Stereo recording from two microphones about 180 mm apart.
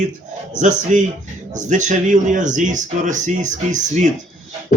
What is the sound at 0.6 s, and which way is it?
A man's voice, 45° right (ahead or behind).